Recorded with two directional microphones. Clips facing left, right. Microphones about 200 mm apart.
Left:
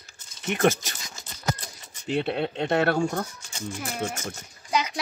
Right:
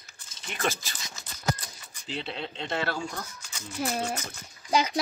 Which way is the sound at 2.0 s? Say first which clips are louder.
Left 9 dB; 55° left (ahead or behind).